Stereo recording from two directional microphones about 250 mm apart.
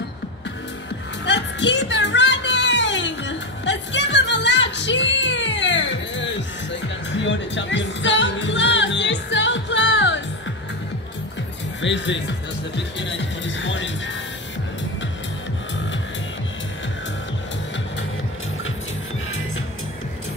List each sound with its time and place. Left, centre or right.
1.2 s music: left
11.8 s music: left